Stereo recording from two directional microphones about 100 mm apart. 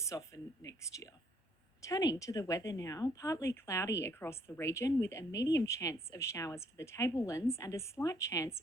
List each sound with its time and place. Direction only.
0.0 s speech: 30° left (ahead or behind)